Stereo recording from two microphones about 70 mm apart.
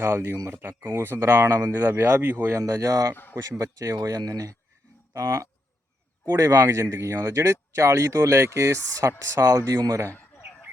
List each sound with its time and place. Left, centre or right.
0.0 s speech: right
2.5 s speech: right
10.1 s bird: left